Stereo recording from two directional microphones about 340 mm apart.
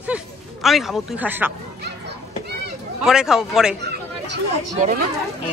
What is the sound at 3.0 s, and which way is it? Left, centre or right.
Speech, centre.